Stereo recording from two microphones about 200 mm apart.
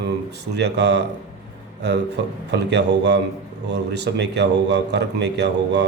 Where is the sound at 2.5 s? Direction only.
60° right (ahead or behind).